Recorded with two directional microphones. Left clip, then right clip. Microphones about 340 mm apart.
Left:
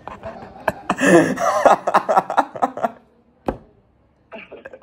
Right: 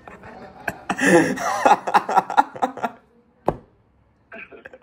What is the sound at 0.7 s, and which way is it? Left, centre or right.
Snicker, centre.